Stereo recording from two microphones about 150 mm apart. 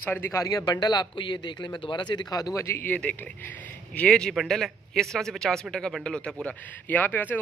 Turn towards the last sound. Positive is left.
turn(degrees=10)  # may be behind; listen again after turning